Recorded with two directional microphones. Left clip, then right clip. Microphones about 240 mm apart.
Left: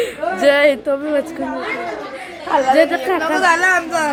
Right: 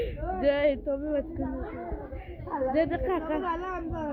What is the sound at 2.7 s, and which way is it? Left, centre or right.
Speech, centre.